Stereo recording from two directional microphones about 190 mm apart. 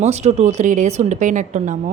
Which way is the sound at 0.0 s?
35° right (ahead or behind).